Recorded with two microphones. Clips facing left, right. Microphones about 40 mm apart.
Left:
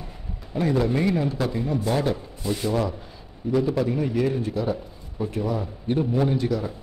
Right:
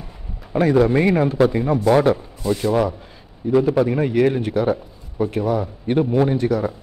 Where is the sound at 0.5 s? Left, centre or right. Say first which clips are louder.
Right 7 dB; right.